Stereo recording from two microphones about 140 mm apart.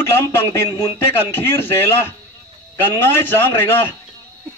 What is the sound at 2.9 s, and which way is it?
Speech, 15° left (ahead or behind).